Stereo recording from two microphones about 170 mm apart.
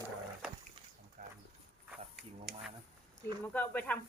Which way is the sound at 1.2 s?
50° right (ahead or behind).